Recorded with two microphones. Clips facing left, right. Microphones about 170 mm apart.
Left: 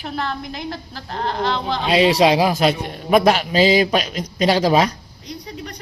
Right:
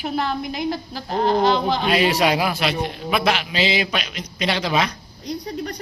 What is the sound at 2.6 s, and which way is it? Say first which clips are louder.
A man's voice: left 4 dB; 40° left (ahead or behind).